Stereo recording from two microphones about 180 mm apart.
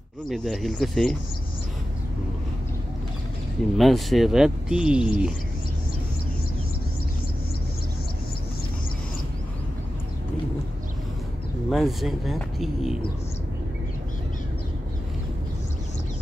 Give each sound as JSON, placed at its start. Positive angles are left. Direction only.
{"t": 0.3, "sound": "speech", "side_deg": 0}
{"t": 3.7, "sound": "speech", "side_deg": 0}
{"t": 11.7, "sound": "speech", "side_deg": 0}